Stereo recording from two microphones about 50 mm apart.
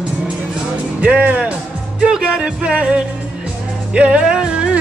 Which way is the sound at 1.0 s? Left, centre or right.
Right.